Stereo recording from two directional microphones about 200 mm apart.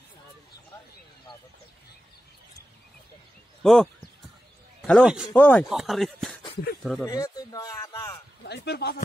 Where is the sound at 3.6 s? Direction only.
Centre (ahead or behind).